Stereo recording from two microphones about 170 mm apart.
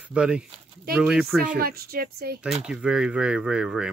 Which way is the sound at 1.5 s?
65° right (ahead or behind).